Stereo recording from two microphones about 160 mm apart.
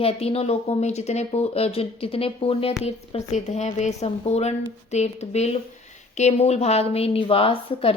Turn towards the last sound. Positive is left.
turn(degrees=35)  # may be behind; listen again after turning